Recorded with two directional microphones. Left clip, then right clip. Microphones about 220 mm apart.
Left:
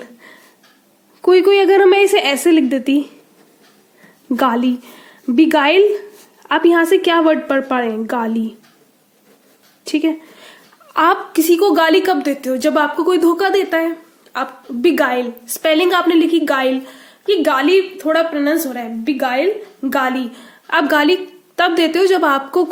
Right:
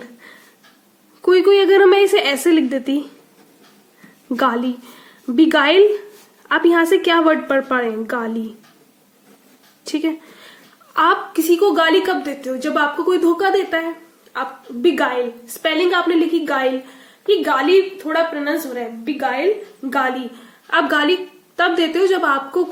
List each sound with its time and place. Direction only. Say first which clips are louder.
0.0 s a sound: left 2 dB; 20° left (ahead or behind)
4.3 s a woman's voice: left 2 dB; 20° left (ahead or behind)
9.8 s a woman's voice: left 4 dB; 20° left (ahead or behind); by 22.6 s 40° left (ahead or behind)